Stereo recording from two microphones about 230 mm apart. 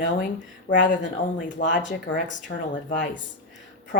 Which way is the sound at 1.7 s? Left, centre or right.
Left.